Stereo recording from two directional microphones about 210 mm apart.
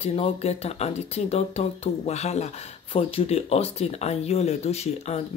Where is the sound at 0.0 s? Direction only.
30° left (ahead or behind).